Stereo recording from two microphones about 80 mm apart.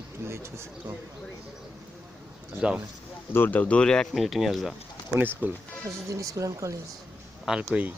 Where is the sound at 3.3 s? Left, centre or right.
Left; by 4.7 s centre.